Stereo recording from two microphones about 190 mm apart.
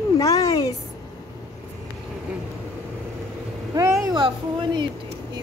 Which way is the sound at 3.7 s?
15° right (ahead or behind).